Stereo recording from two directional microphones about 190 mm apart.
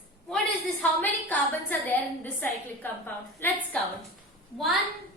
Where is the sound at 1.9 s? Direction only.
10° left (ahead or behind).